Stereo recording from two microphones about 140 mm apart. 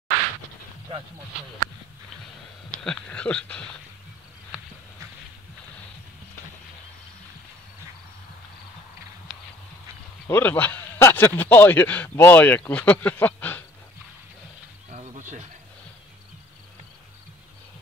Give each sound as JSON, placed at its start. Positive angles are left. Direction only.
{"t": 2.8, "sound": "a man's voice", "side_deg": 5}
{"t": 10.2, "sound": "a man's voice", "side_deg": 15}
{"t": 14.9, "sound": "a sound", "side_deg": -55}